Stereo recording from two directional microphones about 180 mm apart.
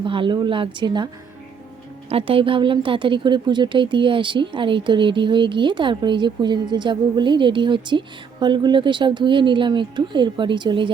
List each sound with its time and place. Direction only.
0.0 s speech: 30° right (ahead or behind)
2.0 s speech: 30° right (ahead or behind)